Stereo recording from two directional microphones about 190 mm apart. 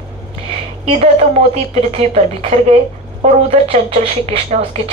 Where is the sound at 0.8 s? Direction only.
35° right (ahead or behind).